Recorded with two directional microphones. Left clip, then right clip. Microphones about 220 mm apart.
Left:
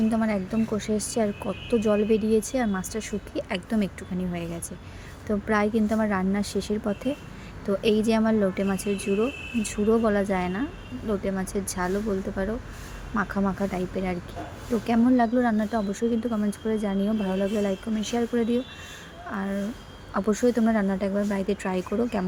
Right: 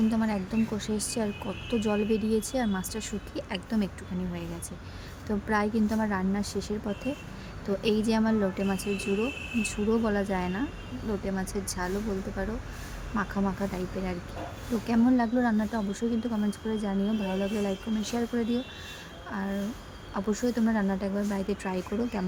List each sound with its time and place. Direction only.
0.1 s speech: 10° left (ahead or behind)
5.5 s speech: 10° left (ahead or behind)